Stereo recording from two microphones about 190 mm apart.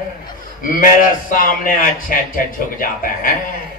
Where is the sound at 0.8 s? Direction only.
45° left (ahead or behind).